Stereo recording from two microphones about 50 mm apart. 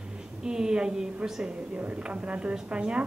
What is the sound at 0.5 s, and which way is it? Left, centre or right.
Speech, centre.